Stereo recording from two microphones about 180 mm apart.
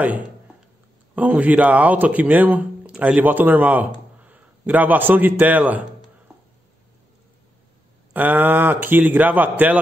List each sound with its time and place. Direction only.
1.1 s a man's voice: 10° right (ahead or behind)
8.1 s speech: 10° right (ahead or behind)